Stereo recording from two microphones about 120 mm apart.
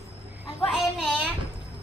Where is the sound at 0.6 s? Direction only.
5° right (ahead or behind).